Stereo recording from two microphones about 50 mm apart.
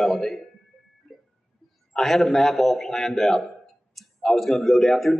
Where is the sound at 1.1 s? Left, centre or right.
Centre.